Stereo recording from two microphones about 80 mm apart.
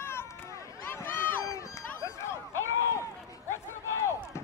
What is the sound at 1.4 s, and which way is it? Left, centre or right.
Run, left.